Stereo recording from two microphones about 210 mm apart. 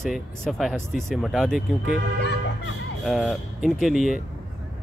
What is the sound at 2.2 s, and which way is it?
Music, 55° left (ahead or behind).